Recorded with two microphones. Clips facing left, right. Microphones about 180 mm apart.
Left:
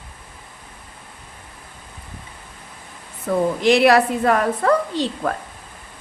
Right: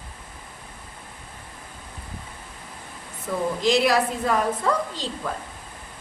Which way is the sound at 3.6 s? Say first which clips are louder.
Left 6 dB; 65° left (ahead or behind).